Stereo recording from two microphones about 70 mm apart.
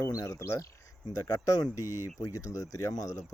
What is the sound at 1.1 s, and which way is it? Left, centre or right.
Speech, left.